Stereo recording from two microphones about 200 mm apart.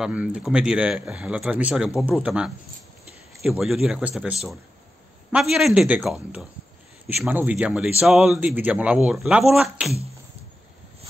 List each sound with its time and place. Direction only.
0.0 s a man's voice: 5° right (ahead or behind)